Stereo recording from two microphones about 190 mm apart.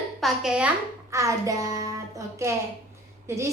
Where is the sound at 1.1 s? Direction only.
15° right (ahead or behind).